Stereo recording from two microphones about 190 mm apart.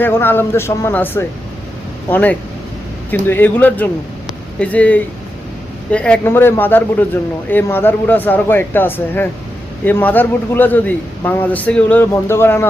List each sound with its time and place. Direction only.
0.0 s a man's voice: 10° left (ahead or behind)